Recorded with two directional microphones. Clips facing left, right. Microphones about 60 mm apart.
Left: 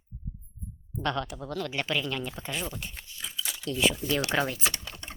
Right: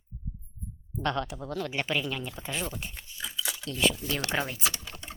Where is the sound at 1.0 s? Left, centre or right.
Right.